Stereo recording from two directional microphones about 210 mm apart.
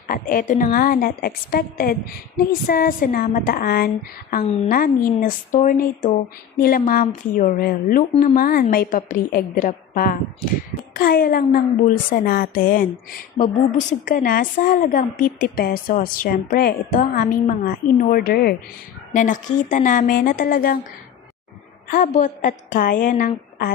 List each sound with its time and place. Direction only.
0.1 s a woman's voice: 40° left (ahead or behind)
4.4 s a woman's voice: 30° left (ahead or behind)
4.7 s a woman's voice: 45° left (ahead or behind)
21.8 s a woman's voice: 40° left (ahead or behind)